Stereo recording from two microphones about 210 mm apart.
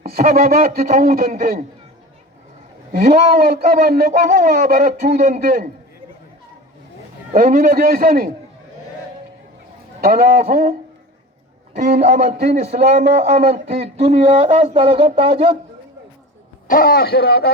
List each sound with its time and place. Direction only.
0.0 s a man's voice: 45° right (ahead or behind)
2.9 s a man's voice: 35° right (ahead or behind)
7.3 s a man's voice: 40° right (ahead or behind)
10.0 s a man's voice: 40° right (ahead or behind)
16.6 s a man's voice: 45° left (ahead or behind)